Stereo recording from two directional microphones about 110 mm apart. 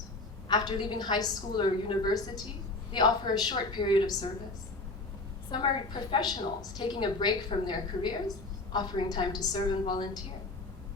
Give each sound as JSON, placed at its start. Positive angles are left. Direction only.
{"t": 0.4, "sound": "a woman's voice", "side_deg": 40}
{"t": 5.5, "sound": "a woman's voice", "side_deg": 45}